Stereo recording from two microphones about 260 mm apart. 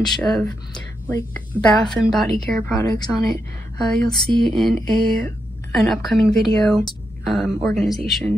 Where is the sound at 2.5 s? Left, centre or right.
Centre.